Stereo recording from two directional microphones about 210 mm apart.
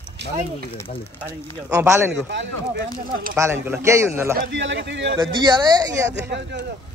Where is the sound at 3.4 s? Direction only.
10° right (ahead or behind).